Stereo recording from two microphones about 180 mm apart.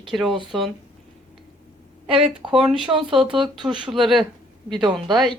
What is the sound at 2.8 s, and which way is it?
Speech, 30° right (ahead or behind).